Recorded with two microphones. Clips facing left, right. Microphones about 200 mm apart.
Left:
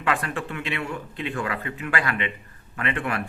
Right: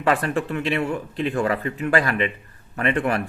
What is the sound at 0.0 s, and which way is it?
A man's voice, 35° right (ahead or behind).